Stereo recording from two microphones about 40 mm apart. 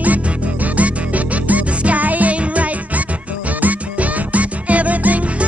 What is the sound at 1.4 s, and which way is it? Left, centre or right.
Music, right.